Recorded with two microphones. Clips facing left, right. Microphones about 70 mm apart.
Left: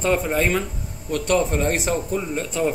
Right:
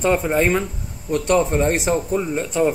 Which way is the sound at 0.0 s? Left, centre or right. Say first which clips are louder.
Right 3 dB; centre.